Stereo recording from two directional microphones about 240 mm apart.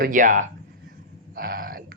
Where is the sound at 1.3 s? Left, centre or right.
Right.